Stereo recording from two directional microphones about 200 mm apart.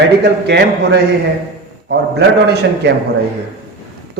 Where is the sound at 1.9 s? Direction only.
55° right (ahead or behind).